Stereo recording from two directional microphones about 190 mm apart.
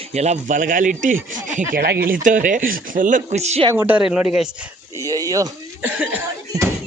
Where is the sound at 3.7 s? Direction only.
10° right (ahead or behind).